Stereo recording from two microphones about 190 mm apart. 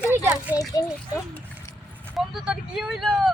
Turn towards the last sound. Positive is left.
turn(degrees=0)  # may be behind; listen again after turning